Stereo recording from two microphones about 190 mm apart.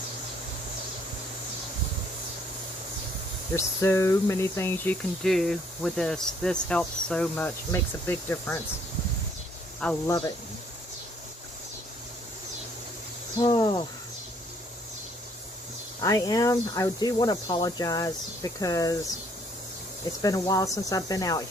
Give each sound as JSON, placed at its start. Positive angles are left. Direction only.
{"t": 3.5, "sound": "speech", "side_deg": 15}
{"t": 10.1, "sound": "speech", "side_deg": 20}
{"t": 13.4, "sound": "speech", "side_deg": 20}
{"t": 16.0, "sound": "speech", "side_deg": 20}
{"t": 20.2, "sound": "speech", "side_deg": 20}